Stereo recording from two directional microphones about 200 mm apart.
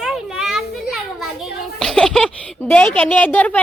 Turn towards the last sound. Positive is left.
turn(degrees=10)  # may be behind; listen again after turning